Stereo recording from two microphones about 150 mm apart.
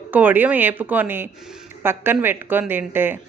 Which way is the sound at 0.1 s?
10° right (ahead or behind).